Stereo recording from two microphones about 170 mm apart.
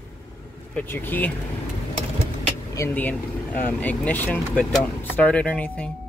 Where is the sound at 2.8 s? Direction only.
10° left (ahead or behind).